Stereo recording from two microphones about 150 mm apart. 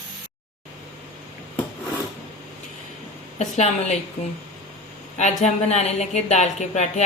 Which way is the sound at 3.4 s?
45° left (ahead or behind).